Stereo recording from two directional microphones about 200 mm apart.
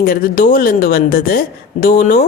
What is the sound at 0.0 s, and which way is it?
Speech, 45° left (ahead or behind).